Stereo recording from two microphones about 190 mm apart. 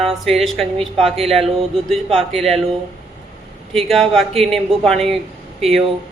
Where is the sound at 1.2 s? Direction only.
Centre (ahead or behind).